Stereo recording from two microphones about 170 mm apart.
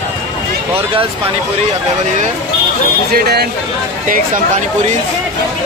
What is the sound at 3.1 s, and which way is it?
Speech, 70° right (ahead or behind).